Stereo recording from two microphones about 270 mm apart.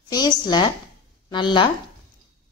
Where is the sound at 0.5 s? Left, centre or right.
Centre.